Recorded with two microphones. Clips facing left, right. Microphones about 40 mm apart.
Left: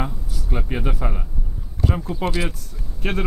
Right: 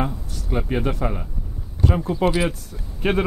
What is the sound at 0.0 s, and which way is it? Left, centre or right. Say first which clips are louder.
Speech: right 3 dB; centre.